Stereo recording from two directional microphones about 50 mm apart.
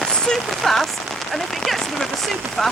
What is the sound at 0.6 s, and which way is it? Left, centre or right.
Speech, centre.